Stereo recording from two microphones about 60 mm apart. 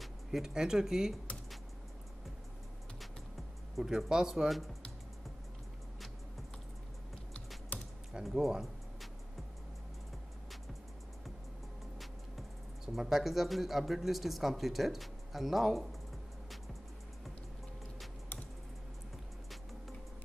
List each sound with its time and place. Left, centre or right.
0.0 s speech: centre
3.7 s speech: centre
7.7 s typing: left
8.1 s music: centre
12.0 s speech: centre